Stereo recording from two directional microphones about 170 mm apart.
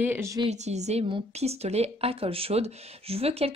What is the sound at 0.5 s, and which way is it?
A woman's voice, 40° right (ahead or behind).